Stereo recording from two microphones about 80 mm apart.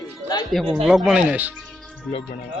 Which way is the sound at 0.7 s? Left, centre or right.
Centre.